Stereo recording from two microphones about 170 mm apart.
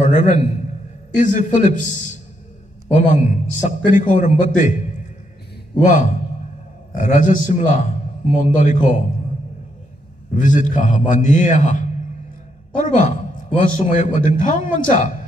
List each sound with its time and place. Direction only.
0.0 s a man's voice: 45° left (ahead or behind)
3.1 s a man's voice: 45° left (ahead or behind)
5.9 s a man's voice: 50° left (ahead or behind)
10.3 s a man's voice: 50° left (ahead or behind)